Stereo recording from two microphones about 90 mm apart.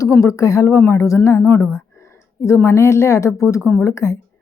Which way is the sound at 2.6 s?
30° left (ahead or behind).